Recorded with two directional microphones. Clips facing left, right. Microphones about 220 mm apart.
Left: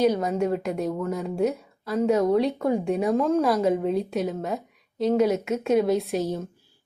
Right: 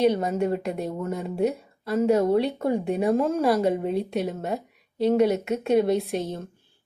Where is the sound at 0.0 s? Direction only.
Centre (ahead or behind).